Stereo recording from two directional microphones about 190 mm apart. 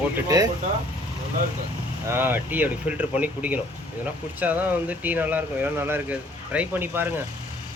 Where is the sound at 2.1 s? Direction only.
10° right (ahead or behind).